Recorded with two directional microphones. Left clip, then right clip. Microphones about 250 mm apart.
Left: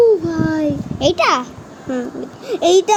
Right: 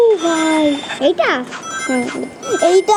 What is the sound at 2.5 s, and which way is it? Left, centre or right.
Speech, centre.